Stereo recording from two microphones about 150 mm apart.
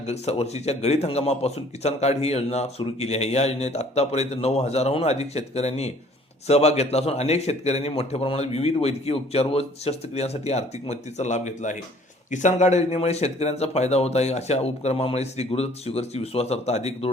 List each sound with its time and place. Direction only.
0.0 s speech: 45° left (ahead or behind)